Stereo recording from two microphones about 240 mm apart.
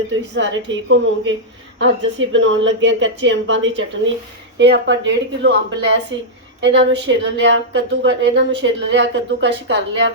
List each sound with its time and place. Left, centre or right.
0.3 s a woman's voice: right